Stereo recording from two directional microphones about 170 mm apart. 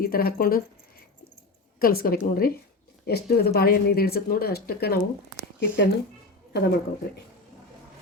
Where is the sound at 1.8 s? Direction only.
60° left (ahead or behind).